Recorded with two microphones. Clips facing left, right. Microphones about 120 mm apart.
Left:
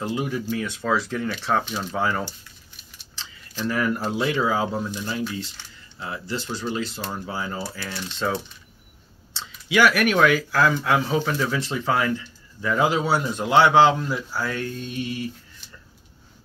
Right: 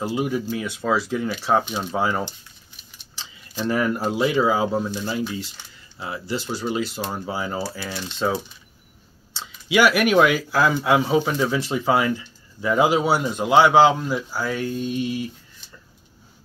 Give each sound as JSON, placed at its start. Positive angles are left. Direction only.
{"t": 0.0, "sound": "speech", "side_deg": -5}
{"t": 3.6, "sound": "speech", "side_deg": -20}
{"t": 4.0, "sound": "speech", "side_deg": -10}
{"t": 7.8, "sound": "speech", "side_deg": -5}